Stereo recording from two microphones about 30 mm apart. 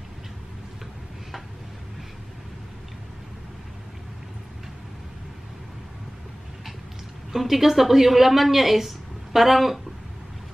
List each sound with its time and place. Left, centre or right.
7.3 s a woman's voice: centre